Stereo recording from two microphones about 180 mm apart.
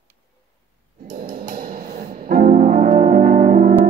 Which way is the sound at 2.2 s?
50° right (ahead or behind).